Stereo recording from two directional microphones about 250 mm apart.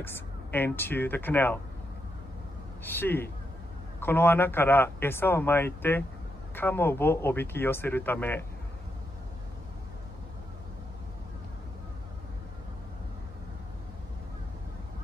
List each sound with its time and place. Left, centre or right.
0.0 s a man's voice: centre
2.8 s a man's voice: centre